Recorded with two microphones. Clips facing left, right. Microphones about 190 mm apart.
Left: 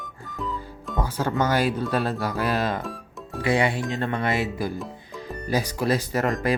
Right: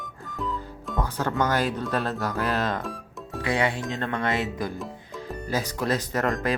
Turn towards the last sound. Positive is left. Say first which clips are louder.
# left 2 dB
turn(degrees=5)  # may be behind; listen again after turning